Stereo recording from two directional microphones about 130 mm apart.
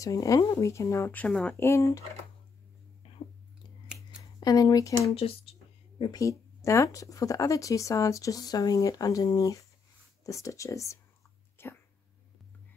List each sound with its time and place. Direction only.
0.0 s speech: 25° left (ahead or behind)
1.2 s speech: 10° left (ahead or behind)
1.6 s speech: 25° left (ahead or behind)
4.2 s speech: 30° left (ahead or behind)
5.1 s a sound: 45° left (ahead or behind)
6.1 s speech: 25° left (ahead or behind)
11.5 s a sound: 15° left (ahead or behind)